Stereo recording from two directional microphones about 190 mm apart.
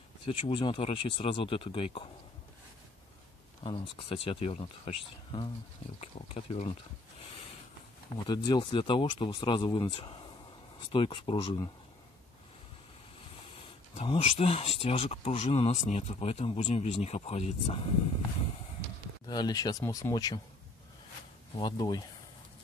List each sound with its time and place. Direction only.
0.3 s speech: 25° left (ahead or behind)
3.6 s speech: 25° left (ahead or behind)
8.5 s speech: 25° left (ahead or behind)
13.6 s speech: 30° left (ahead or behind)
19.2 s speech: 20° left (ahead or behind)
21.5 s speech: 20° left (ahead or behind)